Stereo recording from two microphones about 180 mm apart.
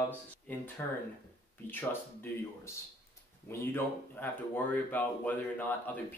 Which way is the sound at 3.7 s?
10° left (ahead or behind).